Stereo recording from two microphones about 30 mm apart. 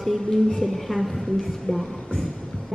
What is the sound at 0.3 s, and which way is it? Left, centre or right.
Speech, centre.